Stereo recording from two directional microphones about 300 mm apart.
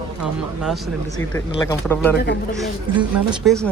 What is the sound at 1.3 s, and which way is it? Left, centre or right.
Speech, centre.